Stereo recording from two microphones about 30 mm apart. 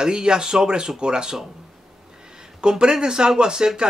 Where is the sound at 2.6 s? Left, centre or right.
Right.